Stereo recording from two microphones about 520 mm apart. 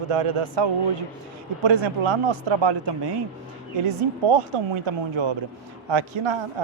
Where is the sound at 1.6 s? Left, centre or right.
Right.